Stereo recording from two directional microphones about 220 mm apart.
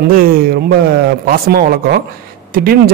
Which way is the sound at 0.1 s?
40° right (ahead or behind).